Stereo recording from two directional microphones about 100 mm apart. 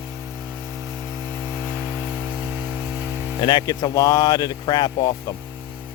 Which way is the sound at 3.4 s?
50° left (ahead or behind).